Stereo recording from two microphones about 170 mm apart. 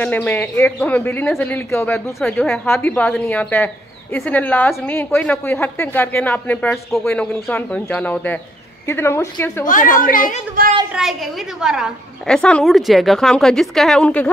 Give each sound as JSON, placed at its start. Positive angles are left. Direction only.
{"t": 0.0, "sound": "speech", "side_deg": 10}
{"t": 2.1, "sound": "a woman's voice", "side_deg": 0}
{"t": 2.6, "sound": "speech", "side_deg": 15}
{"t": 9.7, "sound": "a woman's voice", "side_deg": 50}
{"t": 10.9, "sound": "a woman's voice", "side_deg": 0}